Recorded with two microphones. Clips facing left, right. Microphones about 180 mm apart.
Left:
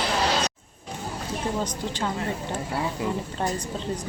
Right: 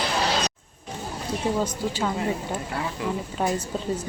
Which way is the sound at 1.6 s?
10° right (ahead or behind).